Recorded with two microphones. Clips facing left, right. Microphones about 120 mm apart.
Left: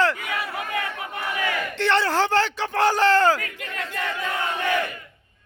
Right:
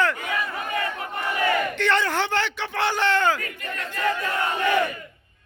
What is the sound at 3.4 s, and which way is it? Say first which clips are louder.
Speech: even; 90° left.